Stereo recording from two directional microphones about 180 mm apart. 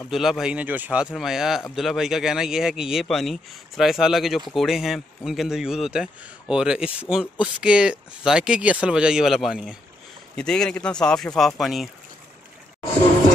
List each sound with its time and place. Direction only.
0.1 s speech: centre (ahead or behind)